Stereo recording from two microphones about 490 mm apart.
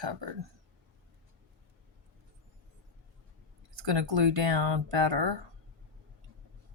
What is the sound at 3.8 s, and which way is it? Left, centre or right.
Speech, right.